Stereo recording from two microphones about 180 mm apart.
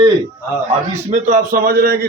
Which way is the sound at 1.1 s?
45° right (ahead or behind).